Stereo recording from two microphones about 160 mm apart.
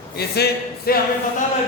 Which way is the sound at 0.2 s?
85° left.